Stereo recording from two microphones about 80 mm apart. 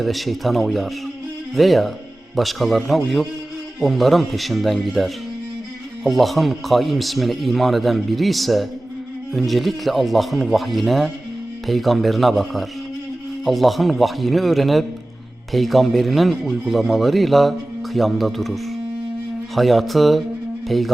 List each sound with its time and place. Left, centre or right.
0.0 s speech: centre